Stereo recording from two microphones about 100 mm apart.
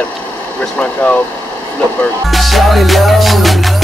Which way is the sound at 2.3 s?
Centre (ahead or behind).